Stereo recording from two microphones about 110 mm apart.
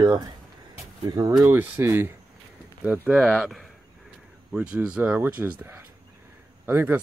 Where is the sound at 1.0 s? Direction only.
35° right (ahead or behind).